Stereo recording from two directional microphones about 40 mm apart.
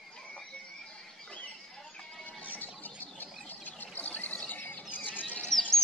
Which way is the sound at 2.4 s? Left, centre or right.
Left.